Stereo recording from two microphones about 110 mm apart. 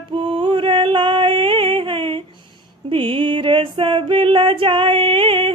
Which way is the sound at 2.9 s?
50° right (ahead or behind).